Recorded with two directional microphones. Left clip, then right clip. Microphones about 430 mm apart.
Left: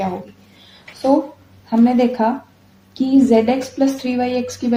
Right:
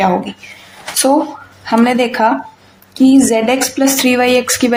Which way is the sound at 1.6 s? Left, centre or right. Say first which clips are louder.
Right 4 dB; left.